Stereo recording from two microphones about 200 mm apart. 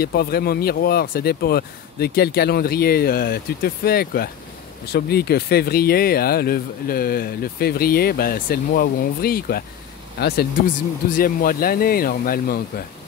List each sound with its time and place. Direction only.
0.0 s speech: 50° left (ahead or behind)